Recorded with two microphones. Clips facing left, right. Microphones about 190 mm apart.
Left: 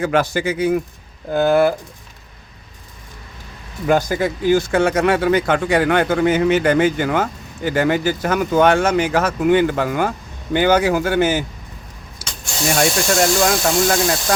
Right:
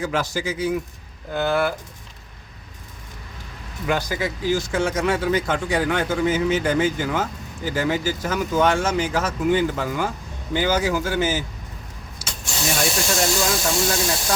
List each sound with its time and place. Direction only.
0.0 s speech: 60° left (ahead or behind)
1.3 s speech: 50° left (ahead or behind)
3.8 s speech: 50° left (ahead or behind)
12.2 s vehicle: 60° left (ahead or behind)
12.8 s speech: 60° left (ahead or behind)